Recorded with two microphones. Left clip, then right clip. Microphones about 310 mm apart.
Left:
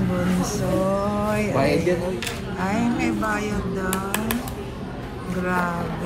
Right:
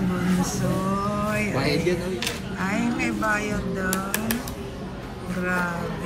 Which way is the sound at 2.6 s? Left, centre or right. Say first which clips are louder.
Left 2 dB; centre.